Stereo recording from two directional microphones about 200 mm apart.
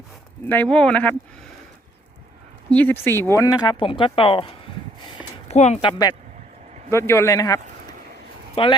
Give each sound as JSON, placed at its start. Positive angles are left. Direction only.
{"t": 0.4, "sound": "speech", "side_deg": 10}
{"t": 2.6, "sound": "speech", "side_deg": 10}
{"t": 7.1, "sound": "speech", "side_deg": 15}
{"t": 8.6, "sound": "speech", "side_deg": 25}